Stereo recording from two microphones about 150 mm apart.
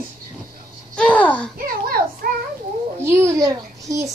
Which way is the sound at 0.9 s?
10° left (ahead or behind).